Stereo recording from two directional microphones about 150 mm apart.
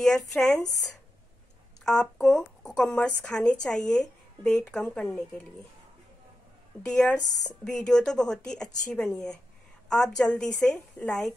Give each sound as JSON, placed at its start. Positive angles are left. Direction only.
{"t": 0.0, "sound": "speech", "side_deg": 5}
{"t": 1.9, "sound": "speech", "side_deg": 5}
{"t": 6.8, "sound": "speech", "side_deg": 5}